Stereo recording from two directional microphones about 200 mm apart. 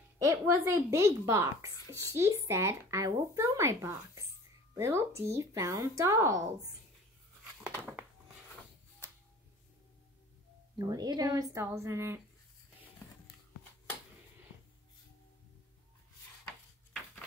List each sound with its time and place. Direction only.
0.2 s speech: 15° right (ahead or behind)
10.8 s speech: 20° right (ahead or behind)